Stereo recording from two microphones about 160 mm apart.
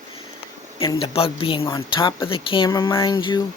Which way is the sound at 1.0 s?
35° left (ahead or behind).